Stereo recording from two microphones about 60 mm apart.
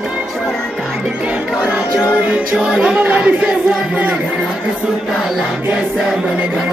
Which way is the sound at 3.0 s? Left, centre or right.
Right.